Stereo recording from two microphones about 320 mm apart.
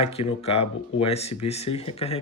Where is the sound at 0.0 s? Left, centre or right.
Centre.